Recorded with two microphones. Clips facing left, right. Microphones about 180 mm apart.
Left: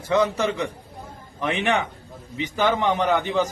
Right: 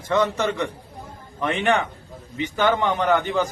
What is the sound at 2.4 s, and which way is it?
Speech, 10° left (ahead or behind).